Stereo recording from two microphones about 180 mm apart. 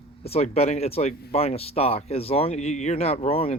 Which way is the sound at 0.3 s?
35° left (ahead or behind).